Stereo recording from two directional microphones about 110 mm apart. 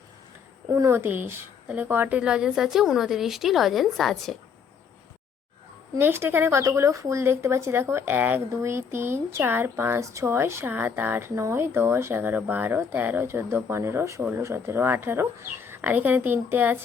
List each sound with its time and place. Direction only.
0.7 s a woman's voice: 25° right (ahead or behind); by 4.4 s centre (ahead or behind)
6.0 s speech: 20° right (ahead or behind)